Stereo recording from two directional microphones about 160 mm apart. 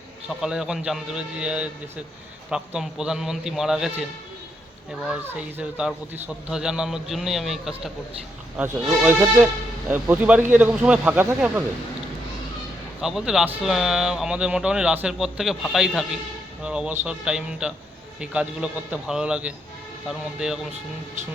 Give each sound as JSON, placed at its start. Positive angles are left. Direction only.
{"t": 0.4, "sound": "a man's voice", "side_deg": -5}
{"t": 5.1, "sound": "a man's voice", "side_deg": -10}
{"t": 8.5, "sound": "a man's voice", "side_deg": -10}
{"t": 13.0, "sound": "a man's voice", "side_deg": -5}